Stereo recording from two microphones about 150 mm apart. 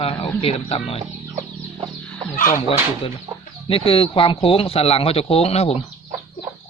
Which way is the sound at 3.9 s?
40° left (ahead or behind).